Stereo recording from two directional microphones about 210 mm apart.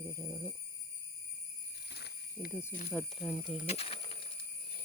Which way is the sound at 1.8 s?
50° left (ahead or behind).